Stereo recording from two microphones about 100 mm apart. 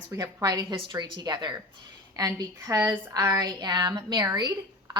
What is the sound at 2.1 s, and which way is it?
Speech, 35° right (ahead or behind).